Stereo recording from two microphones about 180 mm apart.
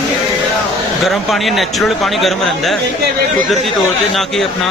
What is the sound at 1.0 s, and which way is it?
Speech, centre (ahead or behind).